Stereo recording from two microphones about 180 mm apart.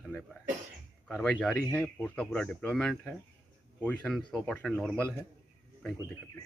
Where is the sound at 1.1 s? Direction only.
5° left (ahead or behind).